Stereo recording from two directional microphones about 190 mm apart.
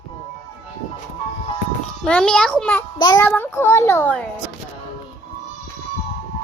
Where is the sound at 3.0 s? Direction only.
20° left (ahead or behind).